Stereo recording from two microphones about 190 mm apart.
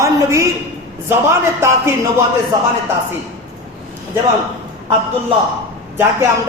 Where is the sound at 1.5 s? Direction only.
15° right (ahead or behind).